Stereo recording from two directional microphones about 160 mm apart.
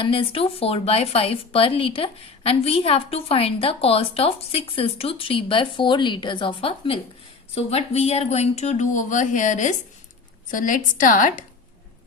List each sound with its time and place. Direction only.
0.0 s a woman's voice: 35° left (ahead or behind); by 11.4 s 55° left (ahead or behind)